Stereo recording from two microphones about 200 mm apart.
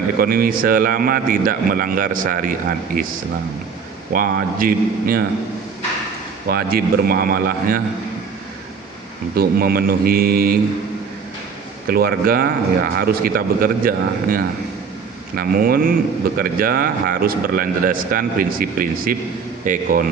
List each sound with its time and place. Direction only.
0.2 s speech: 45° right (ahead or behind)
4.1 s speech: 45° right (ahead or behind)
6.5 s speech: 50° right (ahead or behind)
9.3 s speech: 50° right (ahead or behind)
11.9 s speech: 50° right (ahead or behind)